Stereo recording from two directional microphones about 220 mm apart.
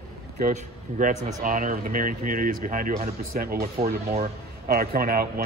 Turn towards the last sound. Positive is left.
turn(degrees=-45)  # may be behind; listen again after turning